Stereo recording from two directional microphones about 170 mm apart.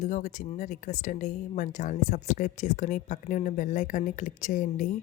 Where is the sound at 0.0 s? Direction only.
45° left (ahead or behind).